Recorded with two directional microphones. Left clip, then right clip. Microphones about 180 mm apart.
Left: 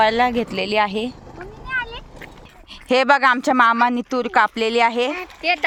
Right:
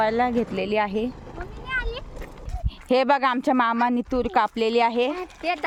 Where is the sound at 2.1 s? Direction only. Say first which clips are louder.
Left 2 dB; 45° left (ahead or behind).